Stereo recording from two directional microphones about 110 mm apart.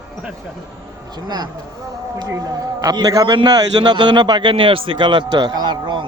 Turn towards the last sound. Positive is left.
turn(degrees=-45)  # may be behind; listen again after turning